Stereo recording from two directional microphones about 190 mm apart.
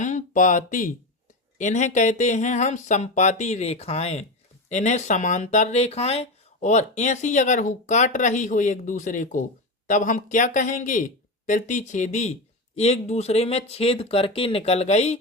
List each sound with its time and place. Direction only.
0.0 s speech: 40° left (ahead or behind)